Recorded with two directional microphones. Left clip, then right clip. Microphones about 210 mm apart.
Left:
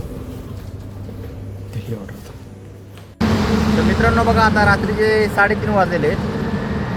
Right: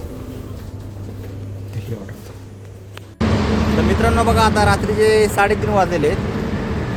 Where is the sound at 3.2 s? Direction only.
50° left (ahead or behind).